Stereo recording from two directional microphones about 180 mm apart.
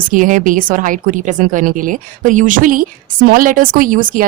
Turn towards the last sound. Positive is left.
turn(degrees=-50)  # may be behind; listen again after turning